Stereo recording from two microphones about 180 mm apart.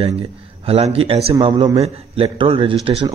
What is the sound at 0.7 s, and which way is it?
A man's voice, 35° right (ahead or behind).